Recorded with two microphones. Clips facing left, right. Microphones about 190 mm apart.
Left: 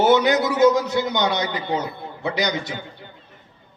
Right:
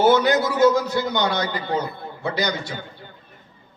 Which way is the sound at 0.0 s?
15° left (ahead or behind).